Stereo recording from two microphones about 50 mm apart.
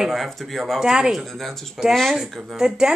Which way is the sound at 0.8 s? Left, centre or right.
Centre.